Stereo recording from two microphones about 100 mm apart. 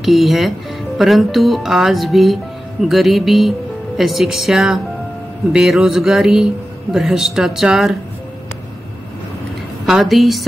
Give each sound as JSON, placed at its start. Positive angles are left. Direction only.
{"t": 0.0, "sound": "speech", "side_deg": 0}
{"t": 9.8, "sound": "speech", "side_deg": -5}